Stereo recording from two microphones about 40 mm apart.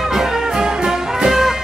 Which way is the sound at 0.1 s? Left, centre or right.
Centre.